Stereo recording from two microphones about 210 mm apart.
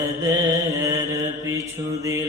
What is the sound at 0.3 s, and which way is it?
Mantra, 15° right (ahead or behind).